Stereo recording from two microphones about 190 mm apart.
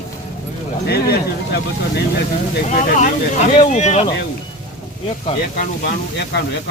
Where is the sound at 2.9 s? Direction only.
40° left (ahead or behind).